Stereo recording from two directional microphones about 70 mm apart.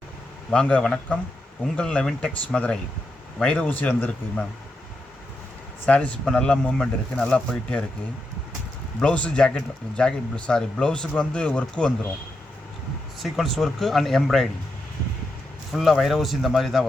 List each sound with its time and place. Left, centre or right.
0.5 s speech: centre
3.7 s speech: left
5.8 s speech: centre
9.0 s speech: centre
13.1 s speech: centre
15.7 s speech: centre